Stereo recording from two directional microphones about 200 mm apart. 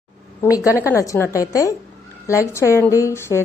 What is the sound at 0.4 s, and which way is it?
A woman's voice, 15° left (ahead or behind).